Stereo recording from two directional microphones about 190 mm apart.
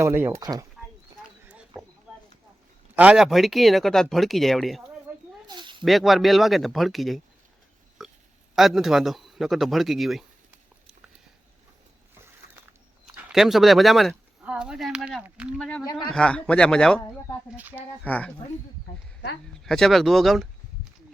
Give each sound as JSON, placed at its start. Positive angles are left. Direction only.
{"t": 0.0, "sound": "speech", "side_deg": -10}
{"t": 1.5, "sound": "a sound", "side_deg": -5}
{"t": 2.9, "sound": "speech", "side_deg": -5}
{"t": 5.5, "sound": "a sound", "side_deg": -25}
{"t": 5.8, "sound": "speech", "side_deg": 0}
{"t": 8.0, "sound": "oink", "side_deg": 0}
{"t": 8.5, "sound": "speech", "side_deg": 0}
{"t": 13.1, "sound": "speech", "side_deg": -5}
{"t": 15.8, "sound": "speech", "side_deg": 20}
{"t": 16.0, "sound": "speech", "side_deg": 5}
{"t": 17.6, "sound": "speech", "side_deg": -10}
{"t": 18.0, "sound": "speech", "side_deg": 5}
{"t": 19.6, "sound": "speech", "side_deg": 0}